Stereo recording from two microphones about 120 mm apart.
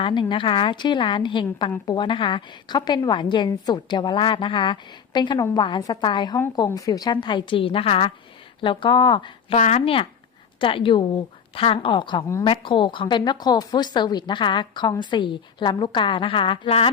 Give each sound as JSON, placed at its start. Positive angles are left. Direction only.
{"t": 0.0, "sound": "a woman's voice", "side_deg": 45}
{"t": 9.6, "sound": "speech", "side_deg": 75}
{"t": 9.8, "sound": "a woman's voice", "side_deg": 50}